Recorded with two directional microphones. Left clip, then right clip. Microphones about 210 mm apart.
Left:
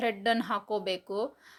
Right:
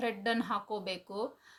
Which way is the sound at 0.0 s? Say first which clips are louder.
Left 5 dB; 40° left (ahead or behind).